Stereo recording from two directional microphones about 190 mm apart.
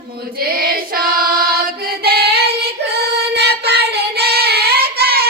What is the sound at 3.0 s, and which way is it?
Child singing, 60° right (ahead or behind).